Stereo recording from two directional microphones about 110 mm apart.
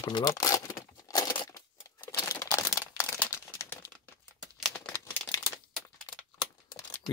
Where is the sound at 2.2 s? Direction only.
35° left (ahead or behind).